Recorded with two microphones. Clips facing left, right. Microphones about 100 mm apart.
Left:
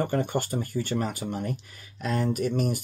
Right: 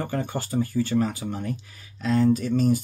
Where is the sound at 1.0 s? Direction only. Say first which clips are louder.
Right 1 dB; 15° left (ahead or behind).